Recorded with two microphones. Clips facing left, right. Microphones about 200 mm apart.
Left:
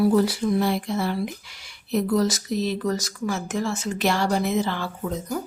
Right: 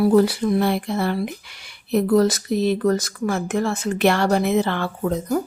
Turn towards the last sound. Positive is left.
turn(degrees=-60)  # may be behind; listen again after turning